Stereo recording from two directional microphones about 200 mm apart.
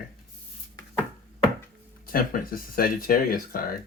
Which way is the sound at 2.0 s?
45° left (ahead or behind).